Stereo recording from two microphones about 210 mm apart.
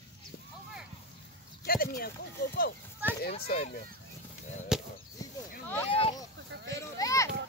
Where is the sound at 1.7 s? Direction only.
45° left (ahead or behind).